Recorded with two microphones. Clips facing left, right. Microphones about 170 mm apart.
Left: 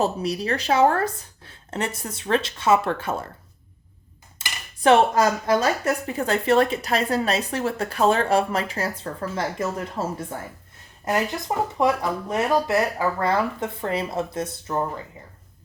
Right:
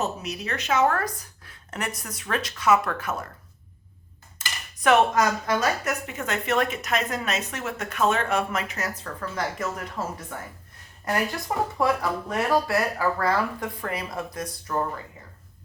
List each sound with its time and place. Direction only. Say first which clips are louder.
0.0 s a woman's voice: left 6 dB; 35° left (ahead or behind)
4.4 s a woman's voice: left 1 dB; 30° left (ahead or behind)